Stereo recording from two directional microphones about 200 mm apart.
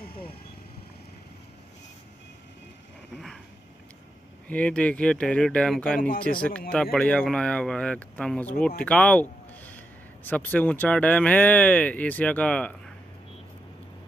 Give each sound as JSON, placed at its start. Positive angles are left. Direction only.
{"t": 0.1, "sound": "vehicle", "side_deg": 25}
{"t": 4.5, "sound": "speech", "side_deg": 5}
{"t": 5.9, "sound": "speech", "side_deg": 45}
{"t": 6.7, "sound": "speech", "side_deg": 5}